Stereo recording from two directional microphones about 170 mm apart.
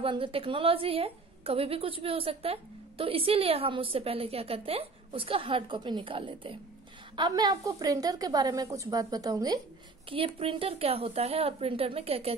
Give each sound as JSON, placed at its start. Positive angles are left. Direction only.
{"t": 0.0, "sound": "a woman's voice", "side_deg": -30}
{"t": 10.0, "sound": "a woman's voice", "side_deg": -30}